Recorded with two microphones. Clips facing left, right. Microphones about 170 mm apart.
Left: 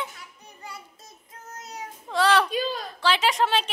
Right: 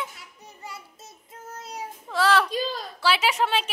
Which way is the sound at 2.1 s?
5° right (ahead or behind).